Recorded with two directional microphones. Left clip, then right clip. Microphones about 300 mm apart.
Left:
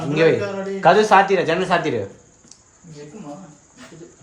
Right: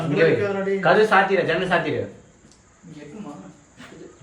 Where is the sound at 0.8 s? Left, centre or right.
Left.